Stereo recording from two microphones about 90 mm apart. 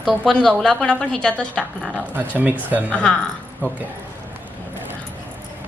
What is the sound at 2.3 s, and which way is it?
Speech, 15° right (ahead or behind).